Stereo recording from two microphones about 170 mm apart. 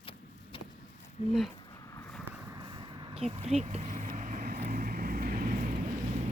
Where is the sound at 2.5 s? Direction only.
25° right (ahead or behind); by 5.6 s 55° right (ahead or behind).